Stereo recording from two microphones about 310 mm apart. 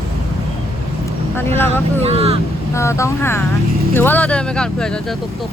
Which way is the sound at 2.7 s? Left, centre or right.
Centre.